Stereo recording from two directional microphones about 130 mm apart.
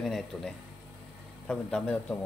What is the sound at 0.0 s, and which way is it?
Speech, centre (ahead or behind).